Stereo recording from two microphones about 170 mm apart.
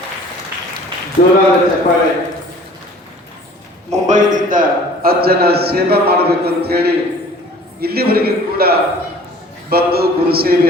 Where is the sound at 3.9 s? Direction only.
45° right (ahead or behind); by 6.2 s 65° right (ahead or behind).